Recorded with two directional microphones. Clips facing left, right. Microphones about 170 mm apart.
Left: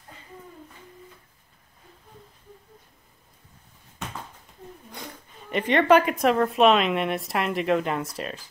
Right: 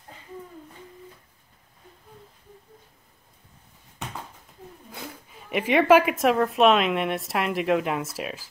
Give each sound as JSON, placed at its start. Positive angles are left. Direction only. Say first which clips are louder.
{"t": 4.9, "sound": "speech", "louder": "right 3 dB", "side_deg": -5}